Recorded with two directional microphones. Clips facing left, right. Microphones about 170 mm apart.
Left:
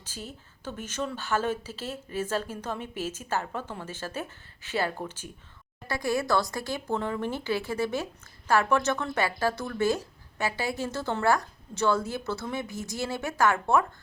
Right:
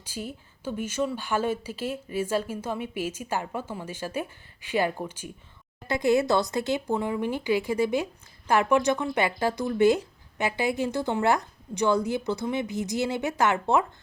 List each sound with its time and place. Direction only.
0.0 s speech: 10° right (ahead or behind)